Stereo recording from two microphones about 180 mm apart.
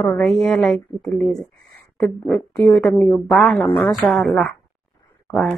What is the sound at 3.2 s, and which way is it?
Speech, centre (ahead or behind).